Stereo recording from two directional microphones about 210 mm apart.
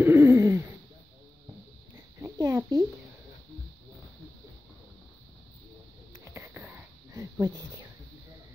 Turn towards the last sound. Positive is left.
turn(degrees=-10)  # may be behind; listen again after turning